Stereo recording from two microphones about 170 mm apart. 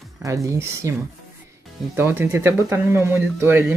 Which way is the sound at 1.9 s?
15° right (ahead or behind).